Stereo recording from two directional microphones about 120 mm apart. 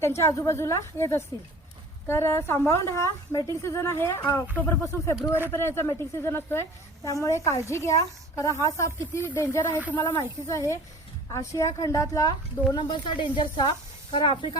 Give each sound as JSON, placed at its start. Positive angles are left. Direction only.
{"t": 0.0, "sound": "a woman's voice", "side_deg": 25}
{"t": 12.7, "sound": "speech", "side_deg": 40}